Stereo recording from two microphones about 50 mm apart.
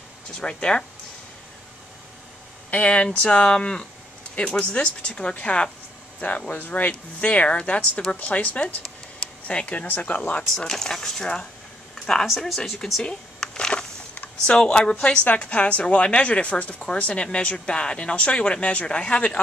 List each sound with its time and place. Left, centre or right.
0.4 s speech: centre
2.7 s a woman's voice: left
9.8 s speech: left
10.5 s speech: centre
13.0 s a sound: centre
14.4 s a woman's voice: centre